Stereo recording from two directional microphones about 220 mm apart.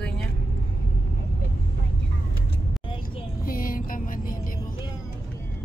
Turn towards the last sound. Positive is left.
turn(degrees=40)  # may be behind; listen again after turning